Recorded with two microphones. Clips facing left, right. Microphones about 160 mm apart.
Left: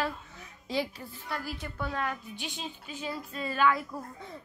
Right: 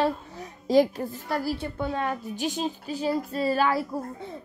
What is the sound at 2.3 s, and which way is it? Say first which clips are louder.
A woman's voice: right 11 dB; 40° right (ahead or behind).